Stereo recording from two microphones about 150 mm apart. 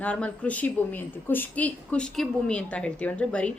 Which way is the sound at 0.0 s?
10° left (ahead or behind).